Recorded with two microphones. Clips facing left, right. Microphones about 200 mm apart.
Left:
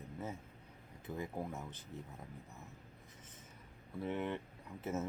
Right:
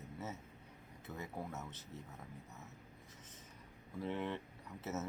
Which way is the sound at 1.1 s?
10° left (ahead or behind).